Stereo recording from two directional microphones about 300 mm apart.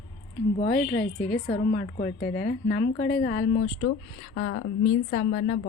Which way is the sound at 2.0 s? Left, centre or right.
Left.